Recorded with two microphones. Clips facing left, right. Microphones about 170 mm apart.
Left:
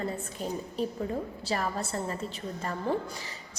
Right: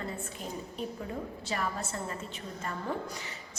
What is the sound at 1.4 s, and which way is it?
Speech, 35° left (ahead or behind).